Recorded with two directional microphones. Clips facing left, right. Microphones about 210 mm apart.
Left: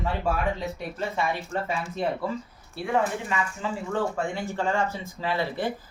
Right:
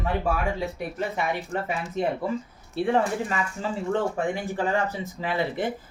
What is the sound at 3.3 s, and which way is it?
Speech, 40° right (ahead or behind).